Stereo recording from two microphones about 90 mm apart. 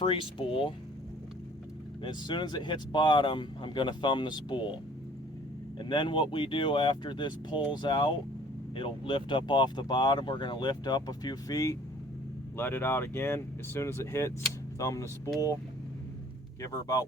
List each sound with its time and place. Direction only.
0.0 s speech: 70° left (ahead or behind)
2.0 s speech: 55° left (ahead or behind)
5.8 s speech: 60° left (ahead or behind)
8.7 s speech: 75° left (ahead or behind); by 11.8 s 40° left (ahead or behind)
12.5 s speech: 25° left (ahead or behind)
16.6 s speech: 40° left (ahead or behind)